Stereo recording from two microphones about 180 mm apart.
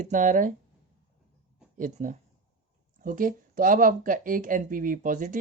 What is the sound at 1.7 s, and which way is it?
Speech, 45° right (ahead or behind).